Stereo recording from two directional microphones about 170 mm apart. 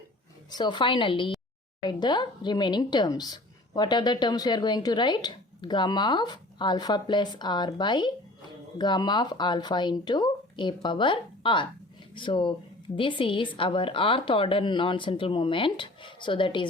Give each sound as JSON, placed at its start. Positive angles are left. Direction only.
{"t": 0.5, "sound": "speech", "side_deg": 25}